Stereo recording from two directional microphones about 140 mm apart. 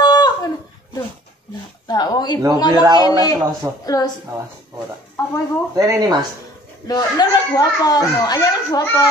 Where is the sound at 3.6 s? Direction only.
20° right (ahead or behind).